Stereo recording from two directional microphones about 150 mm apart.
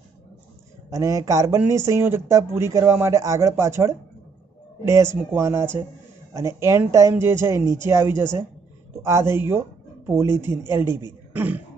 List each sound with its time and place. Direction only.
0.8 s speech: 20° right (ahead or behind)